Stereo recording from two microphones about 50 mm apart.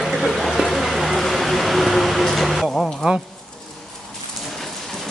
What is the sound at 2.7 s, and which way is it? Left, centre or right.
Speech, centre.